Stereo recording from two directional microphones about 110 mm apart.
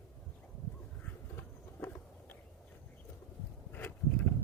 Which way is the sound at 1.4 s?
15° left (ahead or behind).